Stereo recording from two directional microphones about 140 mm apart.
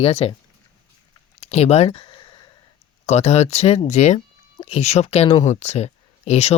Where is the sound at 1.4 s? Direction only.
50° left (ahead or behind); by 2.4 s 35° left (ahead or behind).